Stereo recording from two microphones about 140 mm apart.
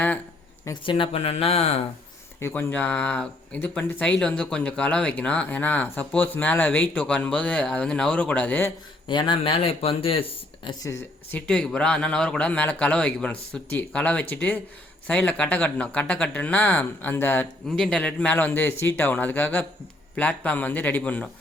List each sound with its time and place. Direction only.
0.9 s speech: 40° left (ahead or behind)
2.4 s speech: 15° left (ahead or behind)
9.0 s speech: 35° left (ahead or behind)
10.8 s speech: 15° left (ahead or behind)